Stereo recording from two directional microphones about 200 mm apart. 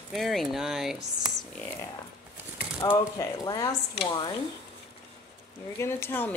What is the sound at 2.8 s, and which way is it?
Speech, 20° left (ahead or behind).